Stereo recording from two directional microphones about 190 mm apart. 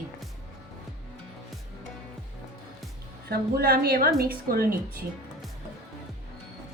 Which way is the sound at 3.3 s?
55° right (ahead or behind).